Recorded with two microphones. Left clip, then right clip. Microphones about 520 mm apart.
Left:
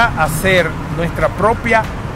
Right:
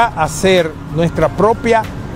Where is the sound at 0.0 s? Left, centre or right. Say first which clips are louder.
Right 1 dB; right.